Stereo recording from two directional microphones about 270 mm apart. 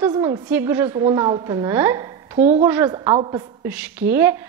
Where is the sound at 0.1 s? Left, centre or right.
Centre.